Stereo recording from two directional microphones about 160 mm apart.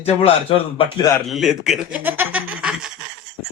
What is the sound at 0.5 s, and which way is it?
Speech, 35° left (ahead or behind).